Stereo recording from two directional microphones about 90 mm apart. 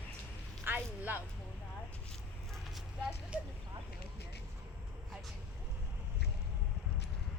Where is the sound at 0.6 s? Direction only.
20° right (ahead or behind).